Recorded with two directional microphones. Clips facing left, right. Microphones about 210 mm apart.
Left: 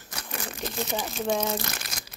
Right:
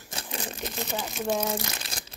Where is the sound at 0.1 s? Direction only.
25° right (ahead or behind).